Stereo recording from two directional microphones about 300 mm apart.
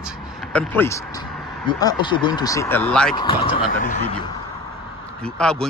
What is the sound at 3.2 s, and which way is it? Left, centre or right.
Speech, centre.